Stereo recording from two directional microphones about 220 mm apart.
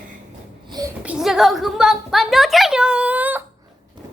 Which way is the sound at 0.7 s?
15° right (ahead or behind).